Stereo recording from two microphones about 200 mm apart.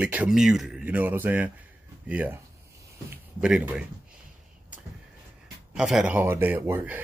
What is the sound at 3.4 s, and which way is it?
Speech, 5° right (ahead or behind).